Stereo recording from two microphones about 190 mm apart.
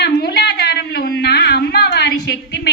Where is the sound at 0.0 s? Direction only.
60° left (ahead or behind).